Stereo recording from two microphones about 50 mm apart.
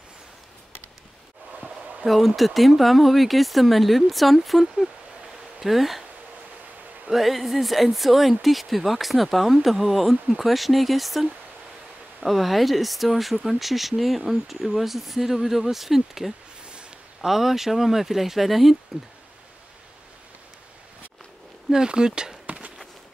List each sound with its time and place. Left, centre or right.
2.0 s speech: centre
7.1 s speech: centre
21.6 s speech: centre